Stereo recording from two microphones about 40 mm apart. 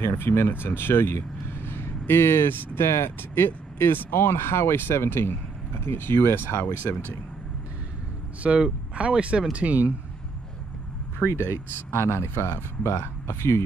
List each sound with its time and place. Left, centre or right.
0.0 s speech: left
8.4 s speech: right
11.3 s speech: left